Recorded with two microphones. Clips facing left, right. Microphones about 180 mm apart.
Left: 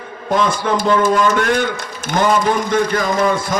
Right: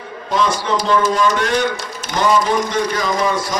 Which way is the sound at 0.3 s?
50° left (ahead or behind).